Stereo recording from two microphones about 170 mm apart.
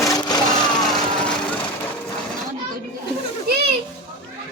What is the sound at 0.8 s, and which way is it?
Vehicle, centre (ahead or behind).